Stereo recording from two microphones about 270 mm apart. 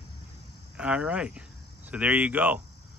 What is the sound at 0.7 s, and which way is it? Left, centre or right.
Speech, centre.